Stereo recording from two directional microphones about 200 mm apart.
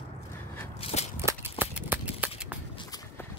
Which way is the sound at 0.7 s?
30° left (ahead or behind).